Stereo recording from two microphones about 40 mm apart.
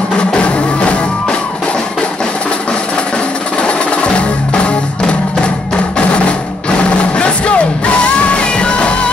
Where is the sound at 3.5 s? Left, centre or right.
Left.